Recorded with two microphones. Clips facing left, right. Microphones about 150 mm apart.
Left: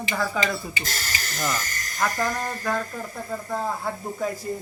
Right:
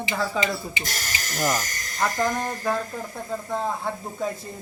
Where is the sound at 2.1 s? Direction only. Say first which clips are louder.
Right 2 dB; 20° right (ahead or behind).